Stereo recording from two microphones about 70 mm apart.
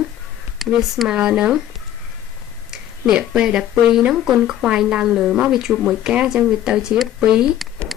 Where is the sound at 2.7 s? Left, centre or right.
Centre.